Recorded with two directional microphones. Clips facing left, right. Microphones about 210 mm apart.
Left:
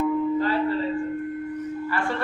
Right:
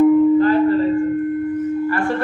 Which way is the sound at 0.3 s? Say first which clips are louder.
Right 9 dB; 50° right (ahead or behind).